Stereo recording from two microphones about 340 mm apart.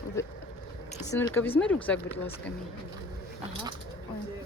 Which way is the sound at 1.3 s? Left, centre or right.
Centre.